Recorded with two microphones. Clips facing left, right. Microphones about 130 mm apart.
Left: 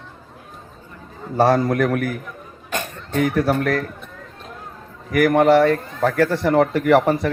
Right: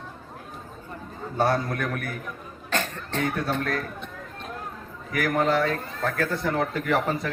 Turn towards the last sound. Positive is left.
turn(degrees=75)  # may be behind; listen again after turning